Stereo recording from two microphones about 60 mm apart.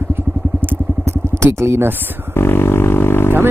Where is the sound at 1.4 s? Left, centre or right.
Right.